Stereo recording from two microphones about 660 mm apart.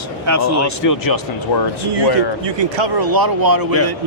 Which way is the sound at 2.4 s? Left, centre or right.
Right.